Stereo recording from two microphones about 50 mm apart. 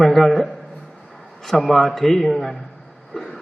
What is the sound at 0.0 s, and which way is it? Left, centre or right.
A man's voice, centre.